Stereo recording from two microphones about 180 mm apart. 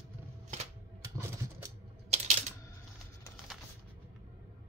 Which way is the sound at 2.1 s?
40° right (ahead or behind).